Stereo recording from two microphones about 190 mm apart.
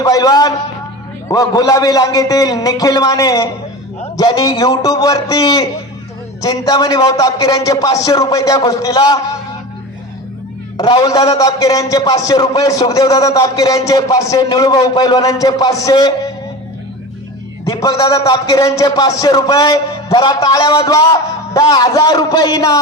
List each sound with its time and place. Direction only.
0.0 s a man's voice: 20° left (ahead or behind)
10.8 s a man's voice: 20° left (ahead or behind)
17.7 s a man's voice: 15° left (ahead or behind)